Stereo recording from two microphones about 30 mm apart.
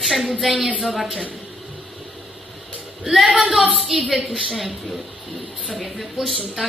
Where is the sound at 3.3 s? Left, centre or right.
Centre.